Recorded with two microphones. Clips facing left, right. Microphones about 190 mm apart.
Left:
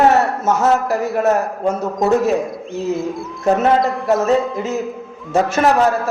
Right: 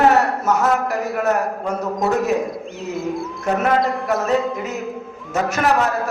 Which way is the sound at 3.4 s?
25° left (ahead or behind).